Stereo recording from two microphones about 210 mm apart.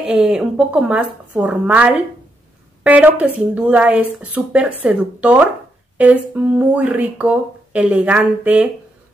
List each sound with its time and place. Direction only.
0.0 s speech: 5° right (ahead or behind)